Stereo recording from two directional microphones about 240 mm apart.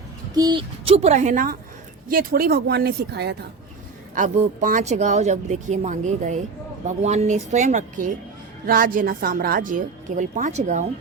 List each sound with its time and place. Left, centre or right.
0.3 s a woman's voice: centre; by 3.3 s right
4.1 s a woman's voice: right